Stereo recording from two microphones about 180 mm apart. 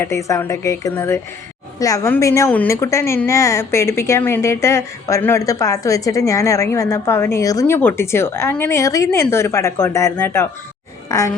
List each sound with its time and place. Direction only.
0.0 s a woman's voice: 15° left (ahead or behind)